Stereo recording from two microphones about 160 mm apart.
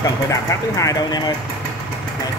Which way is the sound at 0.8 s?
25° left (ahead or behind).